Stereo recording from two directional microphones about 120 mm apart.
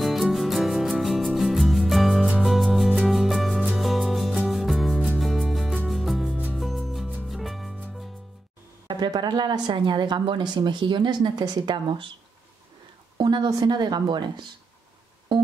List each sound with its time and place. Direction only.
0.0 s music: centre (ahead or behind)
8.8 s speech: 35° right (ahead or behind)
13.2 s speech: 35° right (ahead or behind)